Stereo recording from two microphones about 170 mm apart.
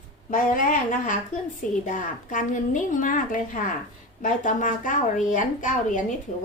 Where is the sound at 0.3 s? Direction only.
50° left (ahead or behind).